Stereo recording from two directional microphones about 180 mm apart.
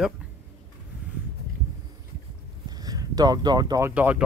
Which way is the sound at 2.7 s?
20° right (ahead or behind).